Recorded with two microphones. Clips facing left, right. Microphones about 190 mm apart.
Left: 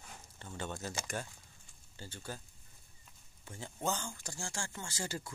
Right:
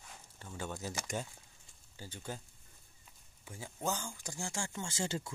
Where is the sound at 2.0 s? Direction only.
15° right (ahead or behind).